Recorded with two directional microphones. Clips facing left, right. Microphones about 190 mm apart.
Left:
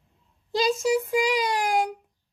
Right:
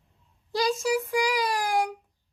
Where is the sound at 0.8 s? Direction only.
20° left (ahead or behind).